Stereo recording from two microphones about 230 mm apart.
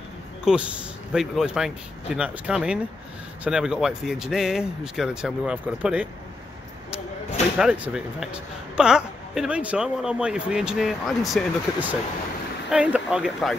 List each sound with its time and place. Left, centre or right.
0.5 s speech: centre
7.5 s speech: centre